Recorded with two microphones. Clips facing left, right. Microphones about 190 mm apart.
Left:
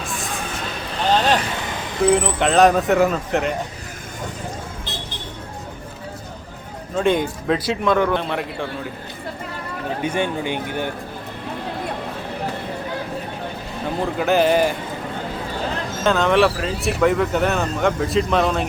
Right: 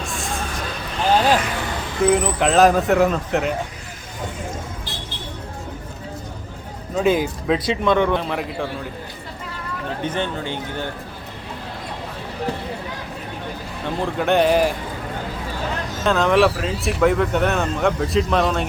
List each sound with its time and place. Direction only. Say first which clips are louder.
0.0 s a sound: even; centre (ahead or behind)
2.0 s speech: even; centre (ahead or behind)
4.9 s vehicle: left 2 dB; 25° left (ahead or behind)
6.9 s speech: even; 5° right (ahead or behind)
10.0 s speech: left 3 dB; 10° left (ahead or behind)
13.8 s speech: even; centre (ahead or behind)
16.0 s speech: even; centre (ahead or behind)